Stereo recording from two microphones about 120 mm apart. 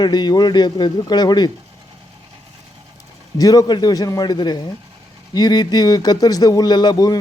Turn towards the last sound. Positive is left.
turn(degrees=35)  # may be behind; listen again after turning